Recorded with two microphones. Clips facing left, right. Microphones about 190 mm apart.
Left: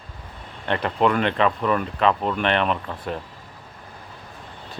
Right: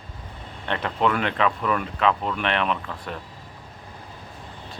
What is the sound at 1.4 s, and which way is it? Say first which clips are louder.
Speech: left 1 dB; 35° left (ahead or behind).